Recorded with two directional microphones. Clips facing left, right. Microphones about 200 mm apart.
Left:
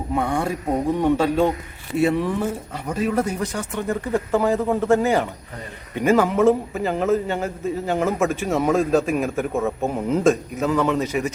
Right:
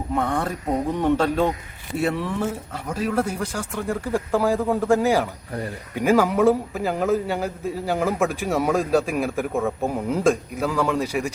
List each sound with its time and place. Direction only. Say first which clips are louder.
0.1 s a man's voice: left 2 dB; 10° left (ahead or behind)